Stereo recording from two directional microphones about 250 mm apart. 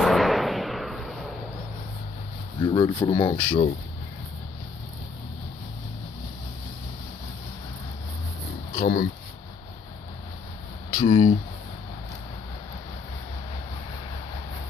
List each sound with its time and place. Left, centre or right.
0.0 s a sound: centre
2.6 s speech: centre
8.7 s speech: left
11.0 s speech: left